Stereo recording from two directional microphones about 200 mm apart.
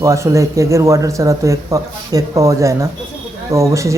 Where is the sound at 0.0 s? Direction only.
15° right (ahead or behind).